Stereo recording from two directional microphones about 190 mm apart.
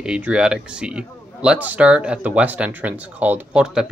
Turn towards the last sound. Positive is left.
turn(degrees=-5)  # may be behind; listen again after turning